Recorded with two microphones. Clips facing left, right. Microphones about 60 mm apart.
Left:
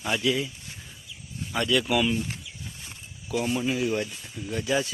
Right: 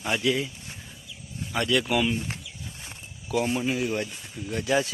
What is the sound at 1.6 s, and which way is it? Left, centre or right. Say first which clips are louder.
Speech: even; right.